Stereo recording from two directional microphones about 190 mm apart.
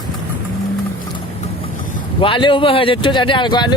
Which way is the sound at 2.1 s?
25° left (ahead or behind).